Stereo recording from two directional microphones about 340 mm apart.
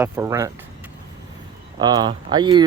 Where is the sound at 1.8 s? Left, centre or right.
Centre.